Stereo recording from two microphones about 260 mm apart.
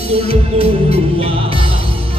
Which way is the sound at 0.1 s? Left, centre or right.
Right.